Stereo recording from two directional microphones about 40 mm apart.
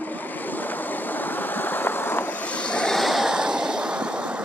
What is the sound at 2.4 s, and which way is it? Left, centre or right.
Vehicle, left.